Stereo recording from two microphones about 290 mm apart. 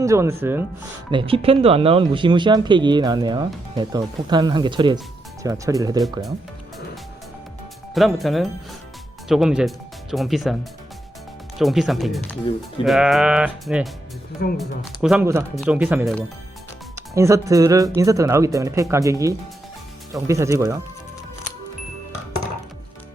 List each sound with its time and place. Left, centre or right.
0.0 s speech: centre
1.1 s speech: centre
7.9 s speech: centre